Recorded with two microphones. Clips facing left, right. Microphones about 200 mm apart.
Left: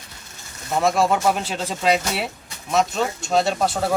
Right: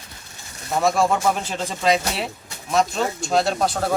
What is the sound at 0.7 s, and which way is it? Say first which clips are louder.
Speech: even; centre (ahead or behind).